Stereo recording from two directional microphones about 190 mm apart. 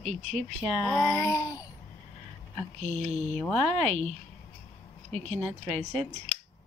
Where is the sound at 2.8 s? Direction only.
35° right (ahead or behind).